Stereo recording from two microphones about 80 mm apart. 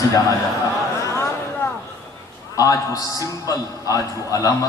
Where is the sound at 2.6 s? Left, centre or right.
Left.